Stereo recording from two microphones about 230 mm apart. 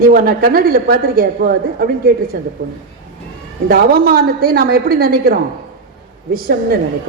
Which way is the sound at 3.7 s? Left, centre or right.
Right.